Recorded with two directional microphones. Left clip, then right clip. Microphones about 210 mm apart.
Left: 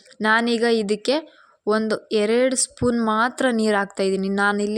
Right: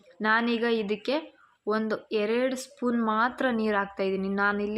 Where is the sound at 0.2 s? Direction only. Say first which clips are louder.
Left 6 dB; 35° left (ahead or behind).